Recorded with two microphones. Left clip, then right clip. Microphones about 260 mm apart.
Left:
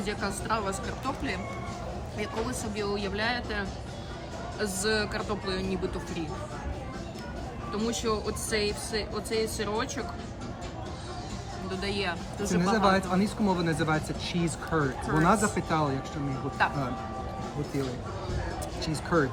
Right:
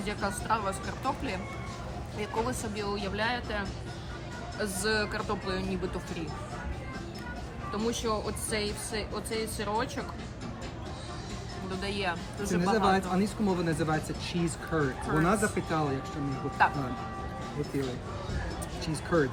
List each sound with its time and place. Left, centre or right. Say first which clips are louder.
0.0 s speech: left 1 dB; centre
7.7 s speech: left 1 dB; centre
11.8 s speech: left 1 dB; centre
12.7 s speech: left 2 dB; centre
16.6 s speech: right 2 dB; centre
18.8 s speech: left 1 dB; centre